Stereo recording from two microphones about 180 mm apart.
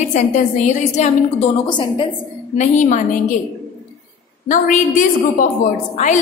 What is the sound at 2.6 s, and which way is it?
Speech, 45° left (ahead or behind).